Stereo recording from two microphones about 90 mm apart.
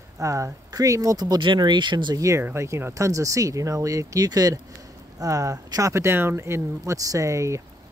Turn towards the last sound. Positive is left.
turn(degrees=-35)  # may be behind; listen again after turning